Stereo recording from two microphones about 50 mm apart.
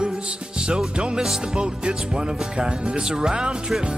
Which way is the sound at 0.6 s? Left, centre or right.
Centre.